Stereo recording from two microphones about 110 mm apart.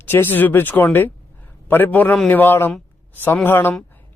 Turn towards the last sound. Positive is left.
turn(degrees=20)  # may be behind; listen again after turning